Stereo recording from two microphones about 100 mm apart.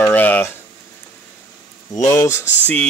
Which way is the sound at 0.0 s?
15° left (ahead or behind).